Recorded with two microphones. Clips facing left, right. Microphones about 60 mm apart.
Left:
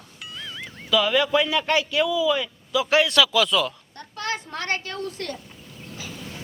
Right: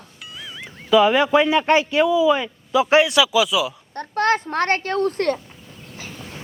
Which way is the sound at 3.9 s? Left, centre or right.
Right.